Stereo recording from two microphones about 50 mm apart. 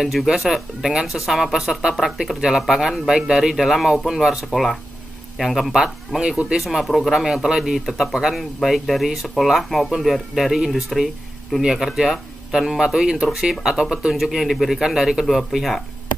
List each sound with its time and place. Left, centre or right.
0.0 s speech: centre
4.5 s speech: centre
5.7 s speech: centre
6.6 s speech: centre